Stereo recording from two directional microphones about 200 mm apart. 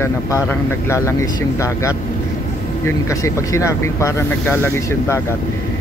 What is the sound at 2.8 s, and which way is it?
Speech, 15° left (ahead or behind).